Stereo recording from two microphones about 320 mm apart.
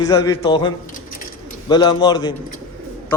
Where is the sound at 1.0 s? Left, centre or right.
Left.